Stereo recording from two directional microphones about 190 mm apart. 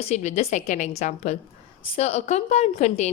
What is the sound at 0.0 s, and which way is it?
Speech, 35° left (ahead or behind).